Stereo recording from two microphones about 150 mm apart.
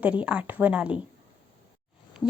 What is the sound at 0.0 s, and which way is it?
A woman's voice, 10° right (ahead or behind).